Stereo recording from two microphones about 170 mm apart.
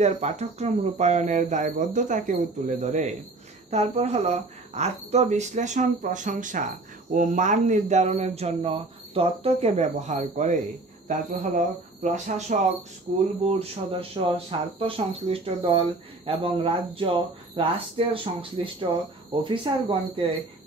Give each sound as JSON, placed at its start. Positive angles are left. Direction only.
{"t": 0.0, "sound": "speech", "side_deg": -40}